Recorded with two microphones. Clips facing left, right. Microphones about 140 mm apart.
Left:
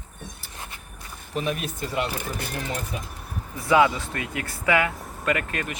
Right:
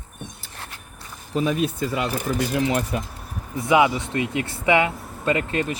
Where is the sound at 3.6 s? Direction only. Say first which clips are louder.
Right 1 dB; 20° right (ahead or behind).